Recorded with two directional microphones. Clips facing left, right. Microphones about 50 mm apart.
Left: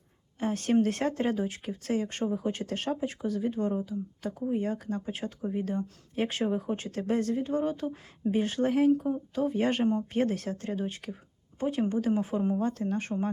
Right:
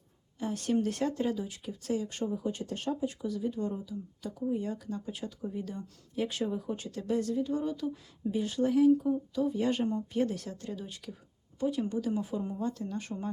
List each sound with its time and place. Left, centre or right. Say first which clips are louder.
0.3 s speech: left 4 dB; left